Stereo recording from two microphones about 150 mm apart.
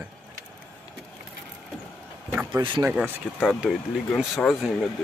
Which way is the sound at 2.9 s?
10° right (ahead or behind).